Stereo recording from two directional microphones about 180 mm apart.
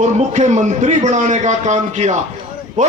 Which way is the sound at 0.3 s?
40° right (ahead or behind).